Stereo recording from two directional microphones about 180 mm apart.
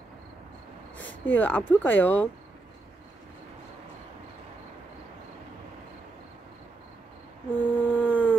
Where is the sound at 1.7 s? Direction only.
10° left (ahead or behind).